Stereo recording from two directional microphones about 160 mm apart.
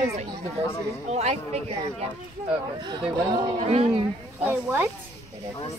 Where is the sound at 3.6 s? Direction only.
45° right (ahead or behind).